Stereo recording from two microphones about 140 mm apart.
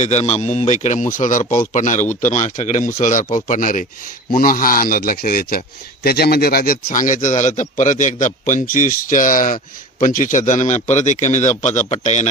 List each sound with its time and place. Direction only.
0.0 s a man's voice: 55° left (ahead or behind); by 3.8 s 70° left (ahead or behind)
4.4 s a man's voice: 90° left; by 12.3 s 55° left (ahead or behind)